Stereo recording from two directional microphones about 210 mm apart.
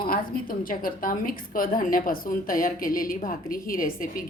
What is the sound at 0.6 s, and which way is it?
A woman's voice, 40° left (ahead or behind).